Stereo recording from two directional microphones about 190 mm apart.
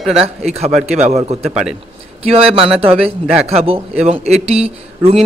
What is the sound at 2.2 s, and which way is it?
Speech, 30° right (ahead or behind).